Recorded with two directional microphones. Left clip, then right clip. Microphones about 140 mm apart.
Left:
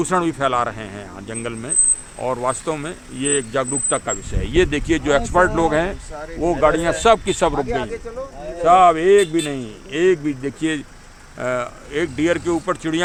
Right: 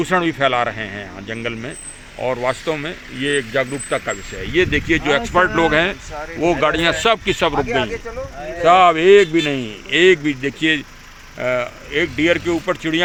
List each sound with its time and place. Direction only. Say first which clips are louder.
0.0 s speech: right 2 dB; centre (ahead or behind); by 5.2 s 15° left (ahead or behind)
5.3 s speech: right 3 dB; 5° right (ahead or behind)
6.9 s speech: left 1 dB; 5° left (ahead or behind)
7.7 s speech: right 4 dB; 25° left (ahead or behind)
8.6 s speech: right 1 dB; 30° right (ahead or behind)
10.4 s speech: right 5 dB; 10° right (ahead or behind)